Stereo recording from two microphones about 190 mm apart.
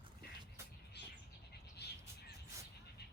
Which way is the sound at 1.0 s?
60° left (ahead or behind).